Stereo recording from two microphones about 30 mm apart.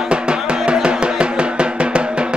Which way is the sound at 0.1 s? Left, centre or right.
Right.